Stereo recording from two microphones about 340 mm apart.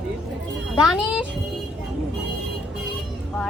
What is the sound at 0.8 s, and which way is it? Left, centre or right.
Speech, centre.